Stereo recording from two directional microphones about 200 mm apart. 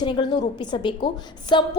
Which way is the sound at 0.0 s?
20° left (ahead or behind).